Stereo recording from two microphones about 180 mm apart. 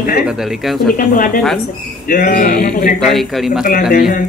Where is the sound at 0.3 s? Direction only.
Centre (ahead or behind).